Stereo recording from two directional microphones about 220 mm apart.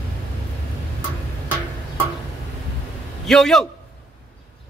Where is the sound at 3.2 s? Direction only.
Centre (ahead or behind).